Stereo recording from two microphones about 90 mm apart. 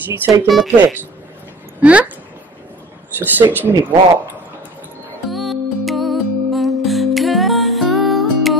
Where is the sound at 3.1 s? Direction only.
20° right (ahead or behind).